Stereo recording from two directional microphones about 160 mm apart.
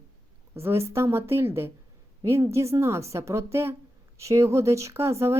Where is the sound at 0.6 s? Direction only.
15° right (ahead or behind).